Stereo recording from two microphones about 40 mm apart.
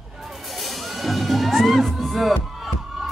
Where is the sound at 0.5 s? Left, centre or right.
Centre.